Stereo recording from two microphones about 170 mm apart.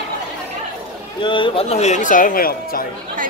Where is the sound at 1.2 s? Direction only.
30° left (ahead or behind); by 2.8 s 60° left (ahead or behind).